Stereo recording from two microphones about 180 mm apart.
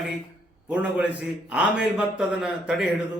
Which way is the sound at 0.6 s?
5° right (ahead or behind).